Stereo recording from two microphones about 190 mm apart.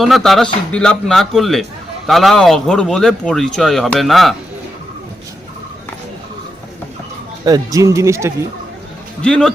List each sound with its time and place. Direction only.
0.0 s speech: centre (ahead or behind)
7.4 s speech: 20° right (ahead or behind)
9.2 s speech: 5° left (ahead or behind)